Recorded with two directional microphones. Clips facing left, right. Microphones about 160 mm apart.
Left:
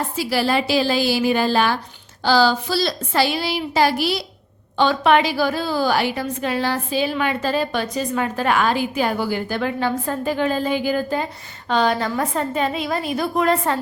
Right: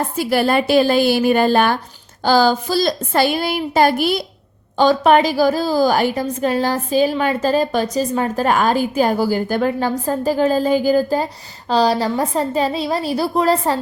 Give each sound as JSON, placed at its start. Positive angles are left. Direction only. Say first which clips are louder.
{"t": 0.2, "sound": "a woman's voice", "louder": "right 4 dB", "side_deg": -50}